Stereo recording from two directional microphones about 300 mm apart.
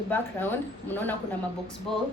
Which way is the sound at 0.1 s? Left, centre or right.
Centre.